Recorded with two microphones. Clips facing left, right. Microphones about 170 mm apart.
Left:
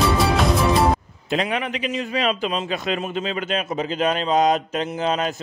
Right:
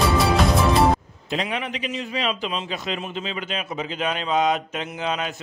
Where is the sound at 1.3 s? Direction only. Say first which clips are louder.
Left 3 dB; 55° left (ahead or behind).